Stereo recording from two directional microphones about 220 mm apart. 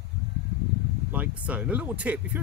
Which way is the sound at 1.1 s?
5° right (ahead or behind).